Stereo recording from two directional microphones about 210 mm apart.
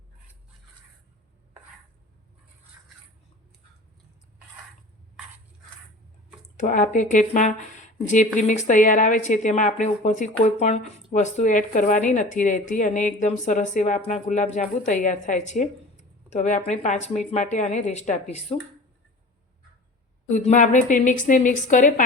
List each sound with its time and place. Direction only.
6.6 s speech: 35° left (ahead or behind)
20.2 s speech: 35° left (ahead or behind)